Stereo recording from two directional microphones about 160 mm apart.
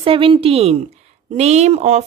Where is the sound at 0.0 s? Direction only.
35° right (ahead or behind).